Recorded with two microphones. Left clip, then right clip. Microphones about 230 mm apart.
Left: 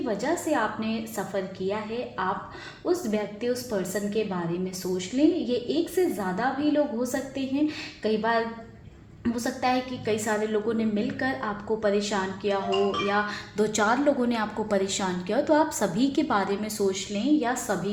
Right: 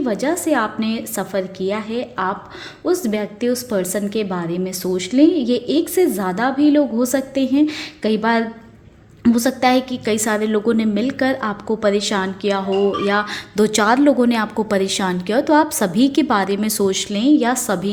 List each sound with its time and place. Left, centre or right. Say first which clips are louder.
0.0 s a woman's voice: right 8 dB; right